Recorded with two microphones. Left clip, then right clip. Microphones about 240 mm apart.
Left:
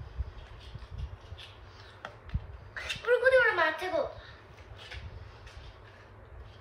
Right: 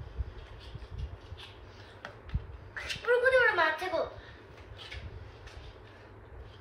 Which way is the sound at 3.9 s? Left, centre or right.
Centre.